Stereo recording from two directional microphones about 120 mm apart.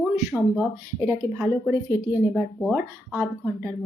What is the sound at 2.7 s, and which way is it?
Speech, 15° right (ahead or behind).